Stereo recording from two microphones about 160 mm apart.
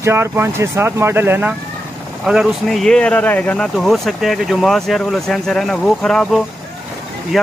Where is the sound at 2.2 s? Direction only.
Centre (ahead or behind).